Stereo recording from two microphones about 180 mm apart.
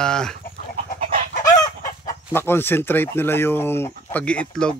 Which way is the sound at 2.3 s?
10° left (ahead or behind).